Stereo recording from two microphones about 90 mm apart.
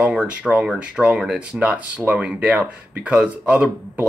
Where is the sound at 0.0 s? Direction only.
10° right (ahead or behind).